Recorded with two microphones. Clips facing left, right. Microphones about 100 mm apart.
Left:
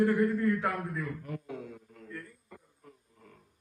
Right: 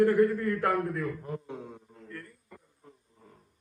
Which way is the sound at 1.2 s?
30° right (ahead or behind).